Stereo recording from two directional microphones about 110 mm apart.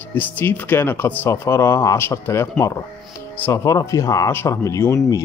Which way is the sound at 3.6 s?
30° left (ahead or behind).